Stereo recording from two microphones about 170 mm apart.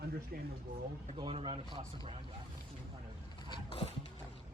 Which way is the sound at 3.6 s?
35° left (ahead or behind).